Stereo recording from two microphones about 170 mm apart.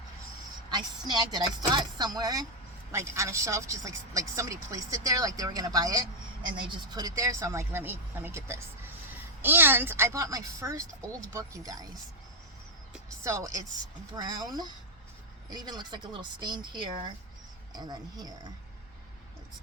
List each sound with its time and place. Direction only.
0.7 s speech: 25° right (ahead or behind)
13.2 s speech: 20° right (ahead or behind)